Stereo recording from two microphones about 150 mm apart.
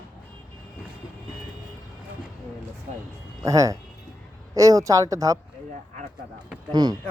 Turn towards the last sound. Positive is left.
turn(degrees=-25)  # may be behind; listen again after turning